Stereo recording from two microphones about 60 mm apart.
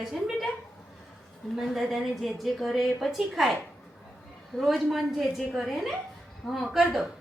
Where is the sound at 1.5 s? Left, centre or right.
Centre.